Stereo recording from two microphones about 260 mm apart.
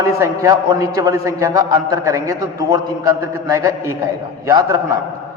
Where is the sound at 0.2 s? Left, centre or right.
Centre.